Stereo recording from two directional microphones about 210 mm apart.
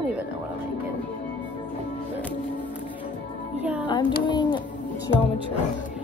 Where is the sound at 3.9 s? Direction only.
20° left (ahead or behind).